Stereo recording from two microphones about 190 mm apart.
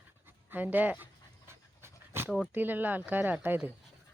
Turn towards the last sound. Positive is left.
turn(degrees=-10)  # may be behind; listen again after turning